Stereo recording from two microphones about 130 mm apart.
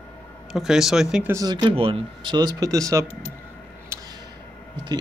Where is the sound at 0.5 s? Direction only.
5° right (ahead or behind).